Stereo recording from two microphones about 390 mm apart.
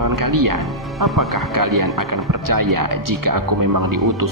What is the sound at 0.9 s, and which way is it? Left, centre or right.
Speech, centre.